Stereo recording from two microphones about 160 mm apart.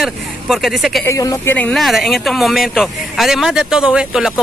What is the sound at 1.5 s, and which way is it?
A man's voice, 5° left (ahead or behind).